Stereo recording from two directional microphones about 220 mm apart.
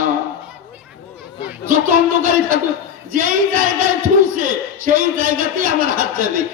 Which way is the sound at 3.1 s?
40° right (ahead or behind).